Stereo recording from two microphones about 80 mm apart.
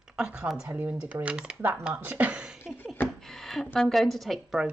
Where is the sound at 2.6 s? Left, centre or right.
Left.